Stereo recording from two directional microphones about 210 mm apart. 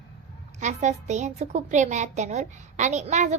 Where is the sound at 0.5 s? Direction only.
35° right (ahead or behind).